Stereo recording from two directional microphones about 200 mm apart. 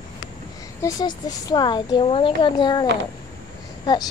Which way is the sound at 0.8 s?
15° left (ahead or behind).